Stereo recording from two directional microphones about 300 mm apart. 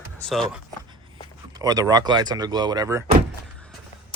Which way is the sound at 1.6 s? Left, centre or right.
Centre.